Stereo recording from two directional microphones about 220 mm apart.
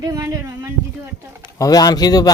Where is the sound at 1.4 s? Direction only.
15° left (ahead or behind).